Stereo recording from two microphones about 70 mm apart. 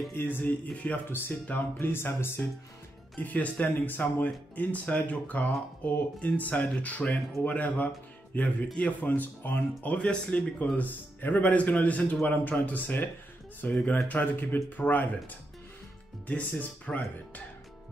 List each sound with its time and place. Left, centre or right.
0.1 s speech: left
3.2 s speech: left
9.9 s speech: centre
16.3 s speech: left